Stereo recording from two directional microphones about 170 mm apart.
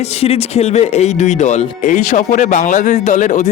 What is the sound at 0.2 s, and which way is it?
Speech, 35° left (ahead or behind).